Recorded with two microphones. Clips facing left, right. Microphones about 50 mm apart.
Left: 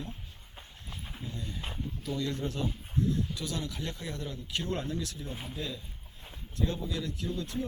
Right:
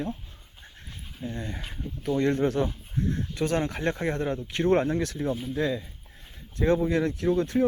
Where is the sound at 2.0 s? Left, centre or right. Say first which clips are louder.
Right 11 dB; right.